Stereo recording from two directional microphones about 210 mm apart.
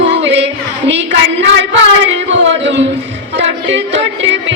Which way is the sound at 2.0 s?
60° right (ahead or behind).